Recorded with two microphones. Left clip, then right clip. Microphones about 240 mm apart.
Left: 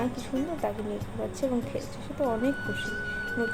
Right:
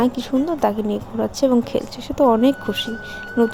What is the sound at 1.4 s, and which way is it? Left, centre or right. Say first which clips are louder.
Speech: right 13 dB; right.